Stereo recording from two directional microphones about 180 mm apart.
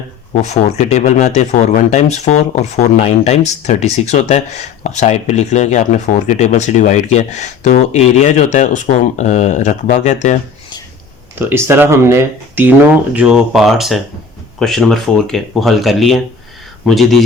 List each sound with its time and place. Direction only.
0.4 s speech: 40° left (ahead or behind)
11.3 s speech: 10° right (ahead or behind)